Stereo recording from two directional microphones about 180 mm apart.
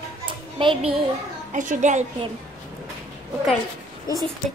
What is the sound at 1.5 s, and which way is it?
Speech, 45° right (ahead or behind).